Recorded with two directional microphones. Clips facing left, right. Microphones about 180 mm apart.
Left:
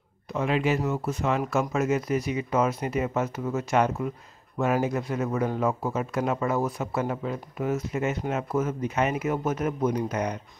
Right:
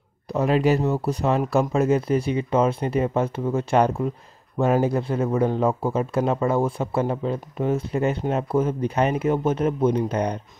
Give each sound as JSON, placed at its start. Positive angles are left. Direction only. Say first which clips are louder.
{"t": 0.3, "sound": "speech", "louder": "right 5 dB", "side_deg": -40}